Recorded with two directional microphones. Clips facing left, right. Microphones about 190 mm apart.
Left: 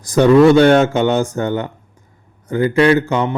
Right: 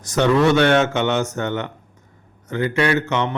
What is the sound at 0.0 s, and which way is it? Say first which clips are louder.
A man's voice: left 7 dB; 35° left (ahead or behind).